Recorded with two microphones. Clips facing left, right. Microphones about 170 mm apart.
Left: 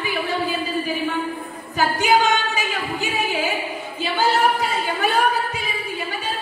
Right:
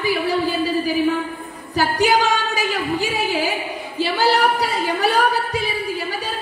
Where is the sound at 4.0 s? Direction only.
35° right (ahead or behind).